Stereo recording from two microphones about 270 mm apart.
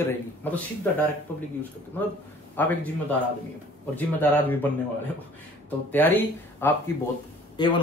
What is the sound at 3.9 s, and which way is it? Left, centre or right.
Speech, centre.